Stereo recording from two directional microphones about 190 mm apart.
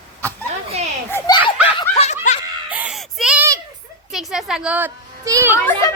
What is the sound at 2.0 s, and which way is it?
Snicker, 35° left (ahead or behind).